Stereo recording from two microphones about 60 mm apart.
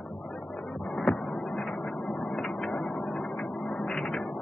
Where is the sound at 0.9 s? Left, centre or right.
Centre.